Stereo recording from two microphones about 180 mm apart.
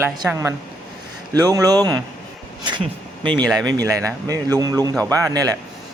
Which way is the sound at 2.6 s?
25° right (ahead or behind).